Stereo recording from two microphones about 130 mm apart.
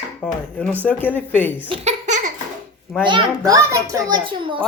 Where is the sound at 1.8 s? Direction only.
65° right (ahead or behind).